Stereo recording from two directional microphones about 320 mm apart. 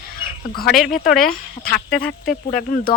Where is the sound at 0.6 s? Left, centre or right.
Centre.